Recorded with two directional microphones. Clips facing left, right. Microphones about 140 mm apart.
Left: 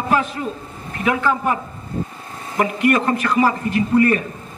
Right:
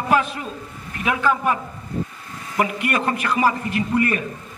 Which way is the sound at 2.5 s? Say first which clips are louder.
Left 5 dB; 25° left (ahead or behind).